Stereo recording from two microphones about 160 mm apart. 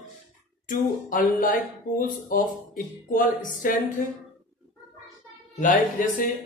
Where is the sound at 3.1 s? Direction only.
60° left (ahead or behind).